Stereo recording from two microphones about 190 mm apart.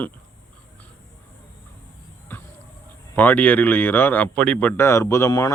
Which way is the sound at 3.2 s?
10° left (ahead or behind).